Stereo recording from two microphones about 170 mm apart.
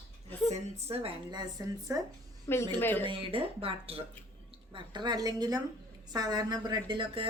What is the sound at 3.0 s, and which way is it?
A woman's voice, 30° right (ahead or behind).